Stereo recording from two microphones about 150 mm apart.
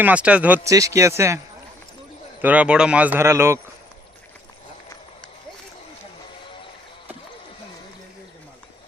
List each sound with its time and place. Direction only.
0.0 s speech: 10° right (ahead or behind)
0.7 s a man's voice: 20° right (ahead or behind)
2.4 s speech: 10° right (ahead or behind)